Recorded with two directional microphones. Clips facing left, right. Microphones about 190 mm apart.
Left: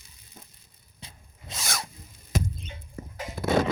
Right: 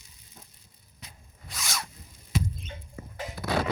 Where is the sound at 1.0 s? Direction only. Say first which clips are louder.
Left 2 dB; 30° left (ahead or behind).